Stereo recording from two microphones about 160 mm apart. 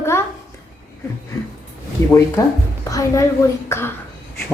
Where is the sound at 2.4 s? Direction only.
20° left (ahead or behind).